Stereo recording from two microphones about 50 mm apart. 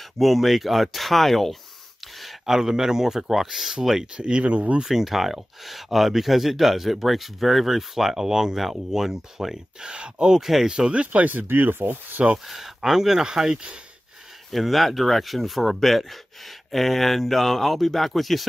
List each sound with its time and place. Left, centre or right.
0.2 s speech: centre
4.2 s speech: right
4.8 s speech: centre
10.4 s speech: centre
10.7 s speech: centre
11.1 s speech: right
12.4 s speech: centre
14.5 s speech: centre